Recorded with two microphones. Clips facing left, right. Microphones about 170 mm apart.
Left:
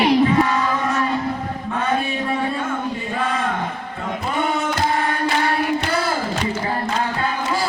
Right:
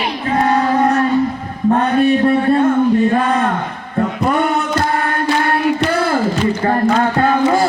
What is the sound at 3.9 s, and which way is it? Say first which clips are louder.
Music: right 10 dB; 65° right (ahead or behind).